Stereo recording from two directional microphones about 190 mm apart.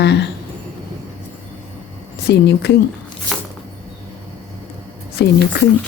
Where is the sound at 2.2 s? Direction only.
60° left (ahead or behind).